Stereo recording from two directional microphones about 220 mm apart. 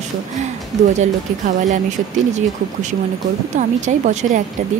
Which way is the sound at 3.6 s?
35° right (ahead or behind).